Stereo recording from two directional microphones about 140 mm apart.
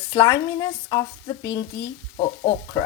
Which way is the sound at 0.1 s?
30° left (ahead or behind).